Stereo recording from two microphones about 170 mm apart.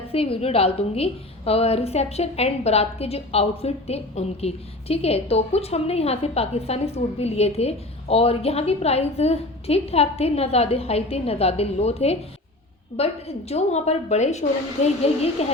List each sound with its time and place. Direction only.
0.1 s a woman's voice: 35° left (ahead or behind)